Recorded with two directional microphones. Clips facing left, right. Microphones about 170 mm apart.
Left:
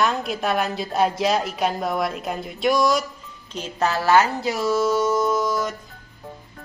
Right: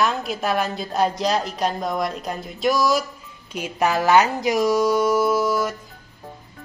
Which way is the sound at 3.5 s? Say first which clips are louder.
Right 2 dB; 10° right (ahead or behind).